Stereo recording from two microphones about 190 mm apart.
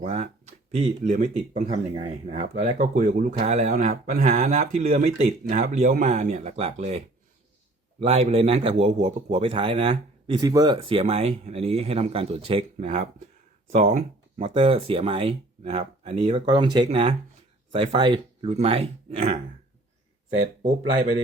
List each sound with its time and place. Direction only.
0.0 s a man's voice: 35° right (ahead or behind)
20.6 s a man's voice: 40° right (ahead or behind)